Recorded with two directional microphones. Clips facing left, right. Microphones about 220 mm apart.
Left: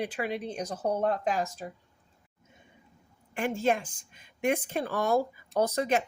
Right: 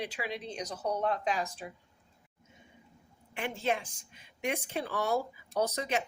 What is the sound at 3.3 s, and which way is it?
Speech, 45° left (ahead or behind).